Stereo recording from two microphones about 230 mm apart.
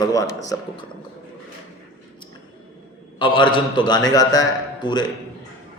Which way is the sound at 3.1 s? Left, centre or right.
Left.